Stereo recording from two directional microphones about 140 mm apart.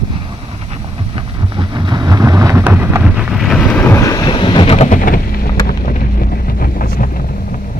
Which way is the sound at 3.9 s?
30° left (ahead or behind).